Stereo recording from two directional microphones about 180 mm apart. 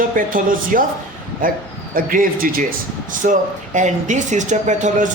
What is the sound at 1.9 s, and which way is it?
A man's voice, 50° right (ahead or behind).